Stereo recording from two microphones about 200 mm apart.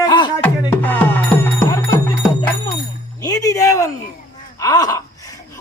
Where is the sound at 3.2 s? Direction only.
20° left (ahead or behind).